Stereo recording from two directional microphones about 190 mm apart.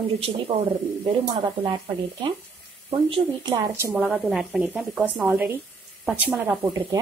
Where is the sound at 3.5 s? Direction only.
10° right (ahead or behind).